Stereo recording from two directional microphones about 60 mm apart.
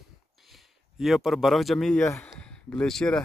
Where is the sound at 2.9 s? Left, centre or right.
Centre.